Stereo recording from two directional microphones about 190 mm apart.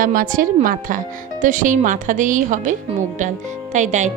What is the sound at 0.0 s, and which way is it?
Speech, 45° right (ahead or behind).